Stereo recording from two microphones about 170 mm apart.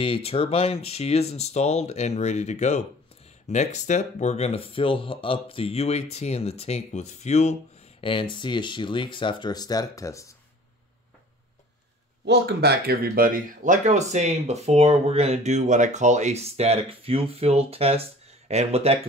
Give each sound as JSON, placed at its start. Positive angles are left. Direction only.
{"t": 0.0, "sound": "speech", "side_deg": 35}
{"t": 12.3, "sound": "speech", "side_deg": -75}